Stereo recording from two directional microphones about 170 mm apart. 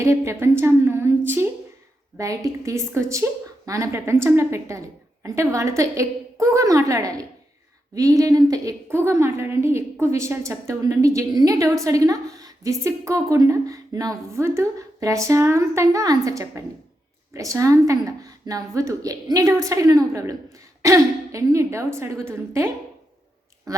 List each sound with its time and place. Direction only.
0.0 s a woman's voice: 15° right (ahead or behind)